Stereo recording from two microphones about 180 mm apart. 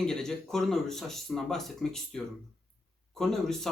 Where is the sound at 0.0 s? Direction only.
5° left (ahead or behind).